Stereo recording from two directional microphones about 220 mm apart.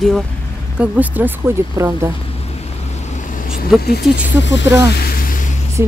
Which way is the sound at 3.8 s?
45° left (ahead or behind).